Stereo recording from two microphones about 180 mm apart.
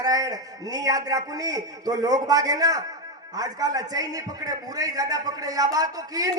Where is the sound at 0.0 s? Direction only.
20° right (ahead or behind).